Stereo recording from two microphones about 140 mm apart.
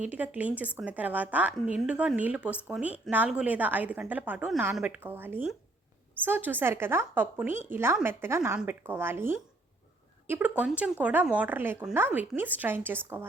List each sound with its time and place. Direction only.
0.0 s a woman's voice: 10° right (ahead or behind)